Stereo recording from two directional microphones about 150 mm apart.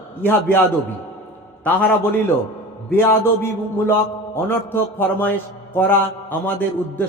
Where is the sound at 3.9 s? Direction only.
15° left (ahead or behind).